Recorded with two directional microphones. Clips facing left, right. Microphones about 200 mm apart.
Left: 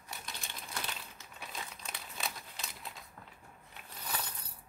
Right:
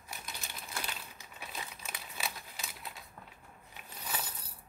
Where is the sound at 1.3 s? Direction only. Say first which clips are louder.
Even; 5° right (ahead or behind).